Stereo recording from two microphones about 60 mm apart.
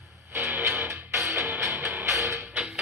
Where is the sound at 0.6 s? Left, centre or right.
Right.